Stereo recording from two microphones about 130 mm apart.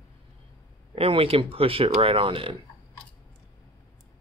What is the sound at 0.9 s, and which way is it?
Speech, 50° right (ahead or behind).